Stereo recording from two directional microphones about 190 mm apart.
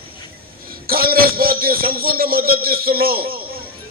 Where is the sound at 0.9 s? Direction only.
50° right (ahead or behind).